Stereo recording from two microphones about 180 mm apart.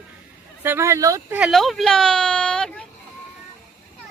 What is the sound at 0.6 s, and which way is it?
Speech, 15° right (ahead or behind).